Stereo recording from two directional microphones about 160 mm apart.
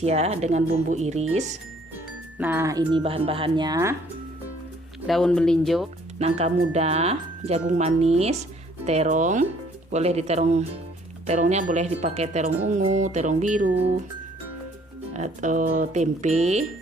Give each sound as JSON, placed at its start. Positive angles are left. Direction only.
{"t": 0.0, "sound": "speech", "side_deg": -40}
{"t": 2.4, "sound": "speech", "side_deg": -15}
{"t": 3.0, "sound": "speech", "side_deg": -35}
{"t": 5.0, "sound": "speech", "side_deg": 5}
{"t": 6.1, "sound": "speech", "side_deg": -40}
{"t": 15.1, "sound": "speech", "side_deg": -45}